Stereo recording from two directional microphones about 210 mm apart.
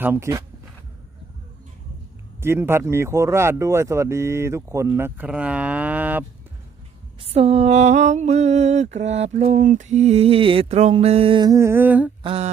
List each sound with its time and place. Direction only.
0.0 s speech: 10° right (ahead or behind)
2.4 s speech: 10° right (ahead or behind)
7.2 s a sound: 30° right (ahead or behind); by 12.1 s 5° right (ahead or behind)
12.2 s mantra: 25° right (ahead or behind)